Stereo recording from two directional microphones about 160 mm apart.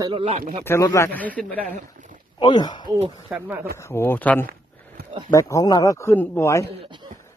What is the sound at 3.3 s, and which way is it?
Speech, 10° right (ahead or behind).